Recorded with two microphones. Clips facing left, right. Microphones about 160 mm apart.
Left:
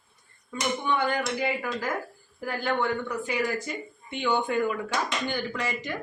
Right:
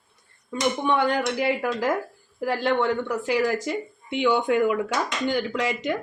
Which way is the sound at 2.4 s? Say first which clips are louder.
Right 5 dB; 90° right.